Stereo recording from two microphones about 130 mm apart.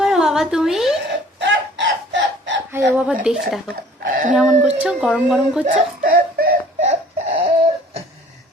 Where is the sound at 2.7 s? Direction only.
10° right (ahead or behind).